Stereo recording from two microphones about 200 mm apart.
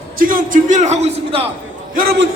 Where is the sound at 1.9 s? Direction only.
45° right (ahead or behind).